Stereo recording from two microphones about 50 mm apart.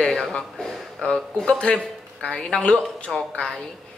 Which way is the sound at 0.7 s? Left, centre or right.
Centre.